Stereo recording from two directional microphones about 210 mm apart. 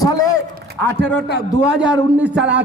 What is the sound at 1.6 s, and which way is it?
Speech, 5° right (ahead or behind).